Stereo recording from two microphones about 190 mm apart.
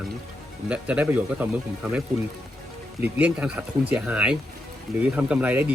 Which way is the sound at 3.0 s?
10° right (ahead or behind).